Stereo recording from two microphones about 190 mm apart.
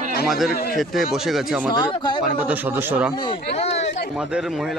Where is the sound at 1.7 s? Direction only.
25° left (ahead or behind).